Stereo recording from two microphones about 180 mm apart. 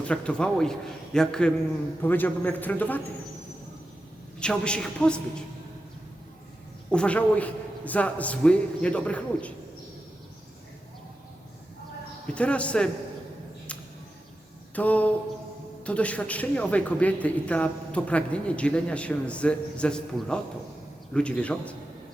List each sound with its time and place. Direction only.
0.0 s a man's voice: 5° left (ahead or behind)
4.4 s a man's voice: 5° left (ahead or behind)
6.9 s speech: 5° left (ahead or behind)
12.3 s speech: 5° left (ahead or behind)
14.8 s speech: 10° left (ahead or behind)